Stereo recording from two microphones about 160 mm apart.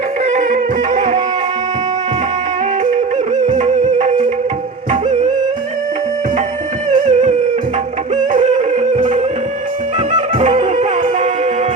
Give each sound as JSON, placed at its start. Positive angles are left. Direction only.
{"t": 0.3, "sound": "music", "side_deg": -50}
{"t": 3.3, "sound": "music", "side_deg": -50}
{"t": 7.0, "sound": "music", "side_deg": -45}
{"t": 10.1, "sound": "music", "side_deg": -45}